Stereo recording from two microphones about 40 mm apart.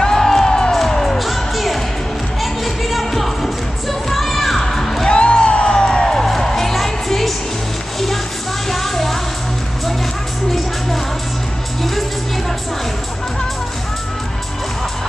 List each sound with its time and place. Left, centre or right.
0.0 s crowd: centre
0.7 s music: centre
4.1 s a sound: centre
5.0 s music: left
6.2 s music: centre
8.6 s music: centre